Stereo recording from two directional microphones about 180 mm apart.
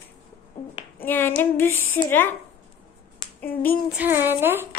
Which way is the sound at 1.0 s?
10° left (ahead or behind).